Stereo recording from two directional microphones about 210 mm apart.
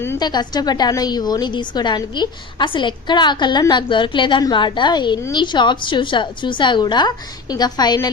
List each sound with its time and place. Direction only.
0.0 s a woman's voice: 15° left (ahead or behind)